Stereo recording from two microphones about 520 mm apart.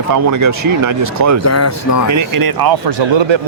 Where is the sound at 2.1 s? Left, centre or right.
Right.